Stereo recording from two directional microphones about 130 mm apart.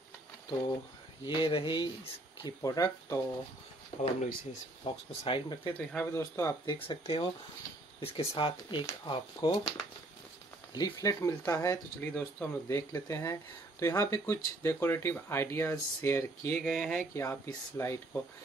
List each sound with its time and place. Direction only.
1.2 s speech: 40° left (ahead or behind)
2.4 s speech: 30° left (ahead or behind)
4.0 s speech: 60° left (ahead or behind)
4.9 s speech: 40° left (ahead or behind)
5.8 s speech: 15° left (ahead or behind)
6.6 s speech: 35° left (ahead or behind)
8.0 s speech: 50° left (ahead or behind); by 16.6 s 20° left (ahead or behind)
16.6 s speech: centre (ahead or behind)
17.1 s speech: 25° left (ahead or behind)